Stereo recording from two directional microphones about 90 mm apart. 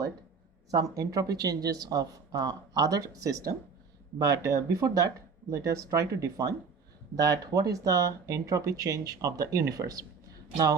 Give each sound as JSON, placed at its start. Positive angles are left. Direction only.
{"t": 0.7, "sound": "speech", "side_deg": -40}